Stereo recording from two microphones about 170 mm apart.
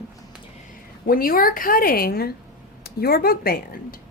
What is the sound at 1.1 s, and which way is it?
A woman's voice, 60° left (ahead or behind).